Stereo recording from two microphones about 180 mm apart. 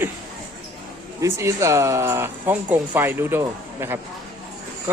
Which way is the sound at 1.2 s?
15° right (ahead or behind).